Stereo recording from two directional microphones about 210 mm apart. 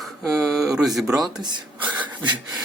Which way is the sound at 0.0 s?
Centre (ahead or behind).